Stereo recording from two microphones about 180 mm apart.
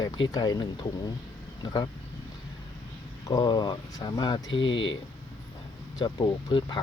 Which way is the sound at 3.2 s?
25° left (ahead or behind).